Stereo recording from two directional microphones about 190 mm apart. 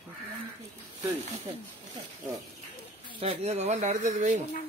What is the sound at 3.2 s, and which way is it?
Speech, 30° right (ahead or behind).